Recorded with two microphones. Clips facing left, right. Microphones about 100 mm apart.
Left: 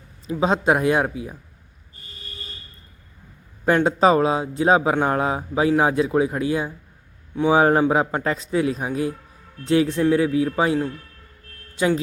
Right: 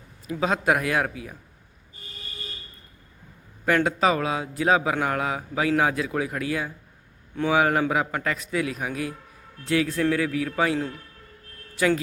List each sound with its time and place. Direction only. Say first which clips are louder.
0.3 s a man's voice: left 4 dB; 25° left (ahead or behind)
3.7 s a man's voice: left 5 dB; 30° left (ahead or behind)